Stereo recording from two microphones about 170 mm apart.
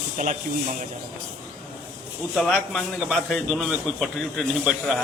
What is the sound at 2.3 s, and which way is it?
A man's voice, centre (ahead or behind).